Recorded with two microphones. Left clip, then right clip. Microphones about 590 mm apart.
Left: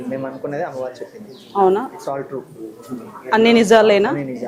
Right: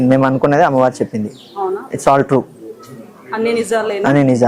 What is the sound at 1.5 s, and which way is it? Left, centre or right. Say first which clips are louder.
Speech: left 6 dB; left.